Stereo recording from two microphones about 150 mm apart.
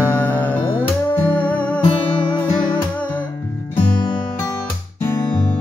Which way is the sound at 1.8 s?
35° left (ahead or behind).